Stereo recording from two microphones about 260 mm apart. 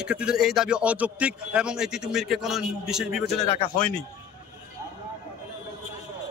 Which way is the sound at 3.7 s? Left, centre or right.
Centre.